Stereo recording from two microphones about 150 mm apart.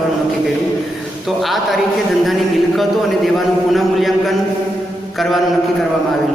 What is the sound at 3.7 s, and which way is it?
Speech, centre (ahead or behind).